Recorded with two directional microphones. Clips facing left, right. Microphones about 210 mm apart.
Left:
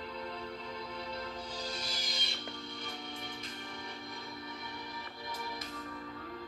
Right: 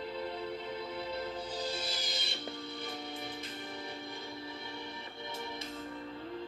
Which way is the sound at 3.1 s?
30° right (ahead or behind).